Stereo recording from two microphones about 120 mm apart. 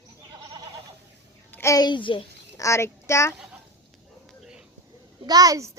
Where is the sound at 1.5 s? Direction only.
25° left (ahead or behind); by 2.2 s 45° left (ahead or behind).